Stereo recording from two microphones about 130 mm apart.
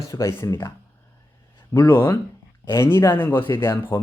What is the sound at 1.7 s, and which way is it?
Speech, 15° left (ahead or behind).